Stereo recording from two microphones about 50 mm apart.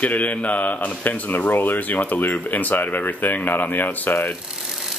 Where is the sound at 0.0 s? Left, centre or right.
Left.